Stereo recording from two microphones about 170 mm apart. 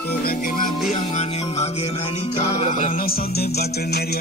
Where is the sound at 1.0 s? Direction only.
40° left (ahead or behind).